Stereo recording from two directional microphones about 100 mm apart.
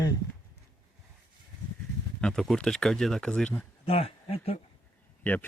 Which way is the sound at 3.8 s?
80° left.